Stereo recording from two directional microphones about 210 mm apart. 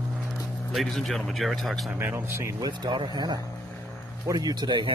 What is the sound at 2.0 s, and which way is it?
Speech, 10° right (ahead or behind).